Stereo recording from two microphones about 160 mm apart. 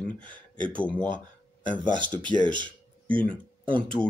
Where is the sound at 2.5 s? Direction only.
30° right (ahead or behind).